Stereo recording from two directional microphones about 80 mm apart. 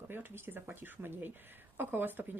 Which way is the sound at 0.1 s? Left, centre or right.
Right.